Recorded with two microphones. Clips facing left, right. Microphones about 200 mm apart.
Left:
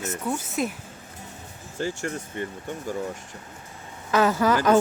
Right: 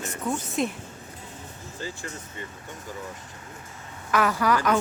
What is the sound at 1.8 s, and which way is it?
Speech, 70° left (ahead or behind).